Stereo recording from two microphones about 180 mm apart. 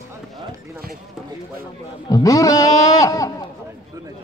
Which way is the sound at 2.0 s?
20° left (ahead or behind).